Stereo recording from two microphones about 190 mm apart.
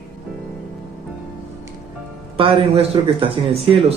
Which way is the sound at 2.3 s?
30° right (ahead or behind).